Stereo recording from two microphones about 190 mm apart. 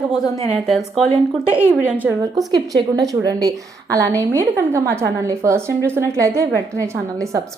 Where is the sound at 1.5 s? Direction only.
10° right (ahead or behind).